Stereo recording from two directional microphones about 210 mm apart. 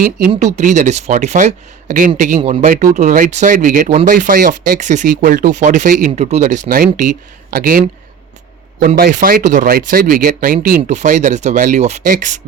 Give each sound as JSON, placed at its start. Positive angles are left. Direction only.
{"t": 0.5, "sound": "speech", "side_deg": -35}
{"t": 4.8, "sound": "speech", "side_deg": -35}
{"t": 9.0, "sound": "speech", "side_deg": -45}